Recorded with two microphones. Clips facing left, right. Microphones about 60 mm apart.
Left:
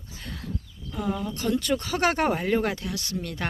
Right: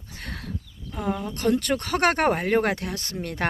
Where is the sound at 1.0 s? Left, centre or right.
Right.